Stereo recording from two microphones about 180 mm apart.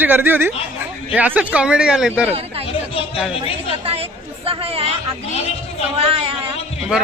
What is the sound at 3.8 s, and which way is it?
Chatter, 30° right (ahead or behind).